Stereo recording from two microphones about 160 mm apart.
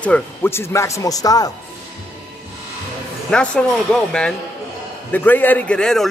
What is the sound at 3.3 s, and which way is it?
A man's voice, 5° left (ahead or behind).